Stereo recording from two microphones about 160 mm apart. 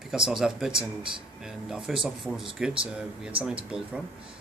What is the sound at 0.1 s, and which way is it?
Speech, 5° right (ahead or behind).